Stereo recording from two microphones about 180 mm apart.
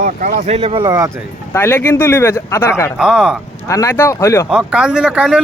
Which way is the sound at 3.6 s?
15° left (ahead or behind).